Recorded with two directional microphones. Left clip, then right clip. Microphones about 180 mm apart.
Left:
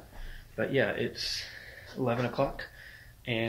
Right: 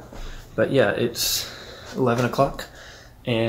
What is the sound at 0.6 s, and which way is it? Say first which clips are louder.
Speech: right 9 dB; 20° right (ahead or behind).